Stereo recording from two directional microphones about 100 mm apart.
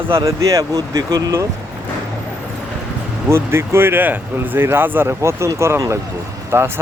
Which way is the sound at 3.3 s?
25° right (ahead or behind).